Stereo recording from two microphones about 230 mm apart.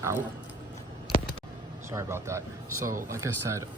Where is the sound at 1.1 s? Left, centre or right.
Left.